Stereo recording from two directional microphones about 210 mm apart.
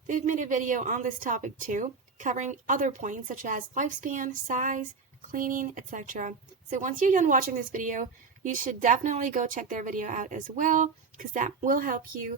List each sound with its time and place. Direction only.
0.1 s a woman's voice: 35° right (ahead or behind)